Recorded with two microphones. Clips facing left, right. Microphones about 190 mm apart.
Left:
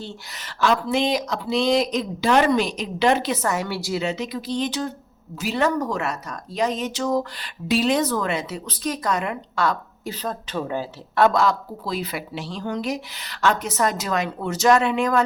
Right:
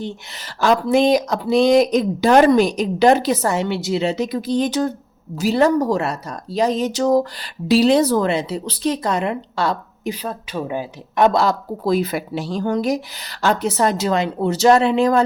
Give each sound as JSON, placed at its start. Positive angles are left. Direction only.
{"t": 0.3, "sound": "speech", "side_deg": -40}
{"t": 4.1, "sound": "speech", "side_deg": -45}
{"t": 5.4, "sound": "speech", "side_deg": -35}
{"t": 10.1, "sound": "a woman's voice", "side_deg": -10}
{"t": 11.3, "sound": "speech", "side_deg": -35}
{"t": 11.9, "sound": "speech", "side_deg": -45}